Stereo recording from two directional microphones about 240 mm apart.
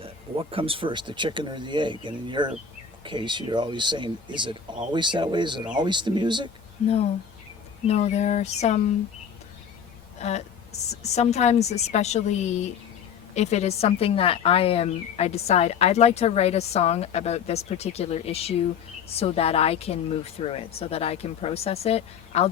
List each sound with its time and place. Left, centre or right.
0.0 s speech: right
6.8 s speech: left
10.2 s speech: left